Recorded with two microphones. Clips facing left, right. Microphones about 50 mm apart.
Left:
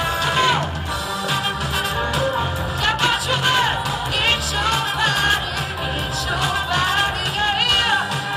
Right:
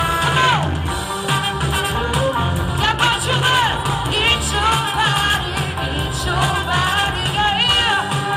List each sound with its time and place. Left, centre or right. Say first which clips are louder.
0.2 s music: right 2 dB; centre
2.1 s music: right 2 dB; centre